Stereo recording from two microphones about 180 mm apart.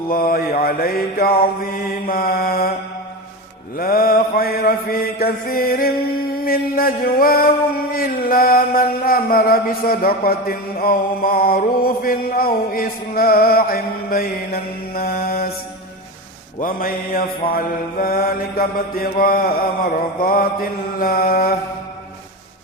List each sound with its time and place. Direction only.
0.1 s mantra: 55° left (ahead or behind)
3.8 s mantra: 55° left (ahead or behind)
16.6 s mantra: 50° left (ahead or behind)